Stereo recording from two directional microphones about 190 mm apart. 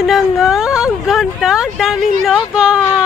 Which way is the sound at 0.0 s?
Centre (ahead or behind).